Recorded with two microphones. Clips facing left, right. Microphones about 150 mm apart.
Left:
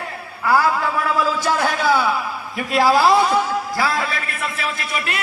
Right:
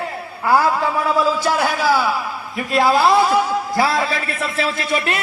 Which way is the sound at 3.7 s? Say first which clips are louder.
Right 6 dB; 25° right (ahead or behind).